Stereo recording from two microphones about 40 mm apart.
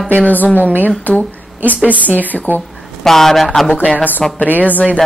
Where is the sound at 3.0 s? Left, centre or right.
Centre.